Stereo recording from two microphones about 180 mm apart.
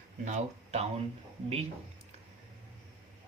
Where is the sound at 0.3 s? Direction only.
40° right (ahead or behind).